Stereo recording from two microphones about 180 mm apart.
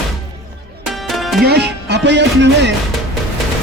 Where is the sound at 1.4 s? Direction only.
65° right (ahead or behind).